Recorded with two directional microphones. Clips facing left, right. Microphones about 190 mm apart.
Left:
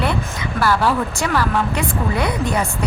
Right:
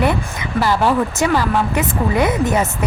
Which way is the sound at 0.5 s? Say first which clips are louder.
Right 2 dB; 20° right (ahead or behind).